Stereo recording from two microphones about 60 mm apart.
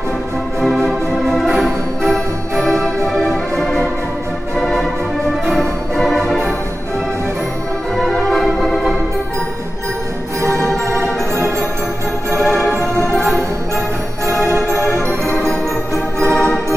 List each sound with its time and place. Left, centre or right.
0.8 s organ: centre
1.6 s music: centre
7.9 s music: centre
10.9 s organ: right
12.3 s music: right
12.9 s music: left
14.4 s music: right
14.9 s music: left
16.3 s organ: centre